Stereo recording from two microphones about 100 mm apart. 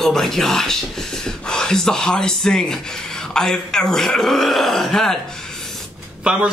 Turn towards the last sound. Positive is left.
turn(degrees=-10)  # may be behind; listen again after turning